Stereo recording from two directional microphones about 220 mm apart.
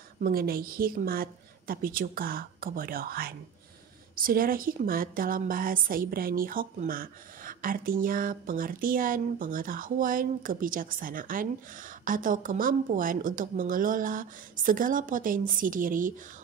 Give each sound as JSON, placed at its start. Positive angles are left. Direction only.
{"t": 0.2, "sound": "a woman's voice", "side_deg": -40}